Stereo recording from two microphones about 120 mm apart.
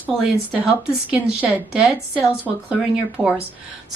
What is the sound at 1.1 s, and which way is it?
A woman's voice, 10° right (ahead or behind).